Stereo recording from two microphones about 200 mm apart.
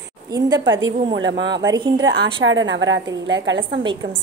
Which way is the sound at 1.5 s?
20° right (ahead or behind).